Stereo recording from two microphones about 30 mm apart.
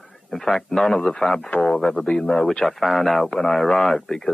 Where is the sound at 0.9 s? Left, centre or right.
Left.